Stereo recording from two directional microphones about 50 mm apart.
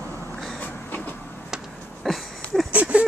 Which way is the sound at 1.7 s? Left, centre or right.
Centre.